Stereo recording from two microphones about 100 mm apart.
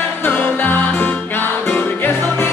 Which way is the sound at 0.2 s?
20° left (ahead or behind).